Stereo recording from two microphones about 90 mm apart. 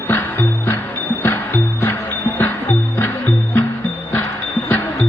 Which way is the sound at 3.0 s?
25° left (ahead or behind).